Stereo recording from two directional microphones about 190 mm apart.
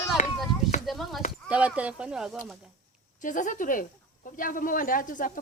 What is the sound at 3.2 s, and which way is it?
Speech, 45° left (ahead or behind).